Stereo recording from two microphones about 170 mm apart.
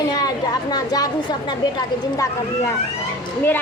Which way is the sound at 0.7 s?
25° left (ahead or behind).